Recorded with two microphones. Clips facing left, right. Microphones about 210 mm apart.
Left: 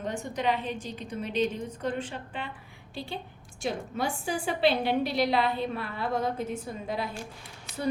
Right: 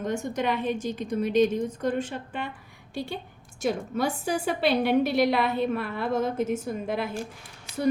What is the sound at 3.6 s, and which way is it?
A woman's voice, 40° right (ahead or behind).